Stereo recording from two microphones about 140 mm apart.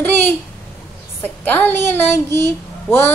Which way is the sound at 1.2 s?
10° left (ahead or behind).